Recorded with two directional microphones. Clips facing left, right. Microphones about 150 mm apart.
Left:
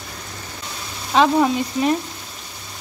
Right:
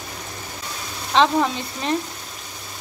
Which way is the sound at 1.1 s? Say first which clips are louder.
Left 2 dB; 10° left (ahead or behind).